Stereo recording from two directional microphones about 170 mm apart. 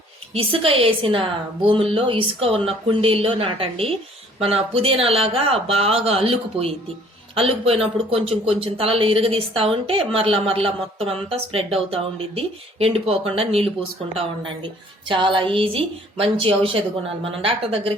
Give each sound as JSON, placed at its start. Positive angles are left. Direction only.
{"t": 0.3, "sound": "speech", "side_deg": -35}